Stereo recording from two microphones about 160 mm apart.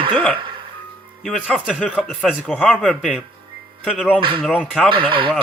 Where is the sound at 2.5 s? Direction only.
5° left (ahead or behind).